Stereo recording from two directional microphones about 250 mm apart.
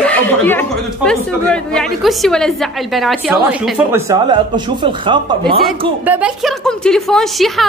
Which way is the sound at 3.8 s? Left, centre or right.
Centre.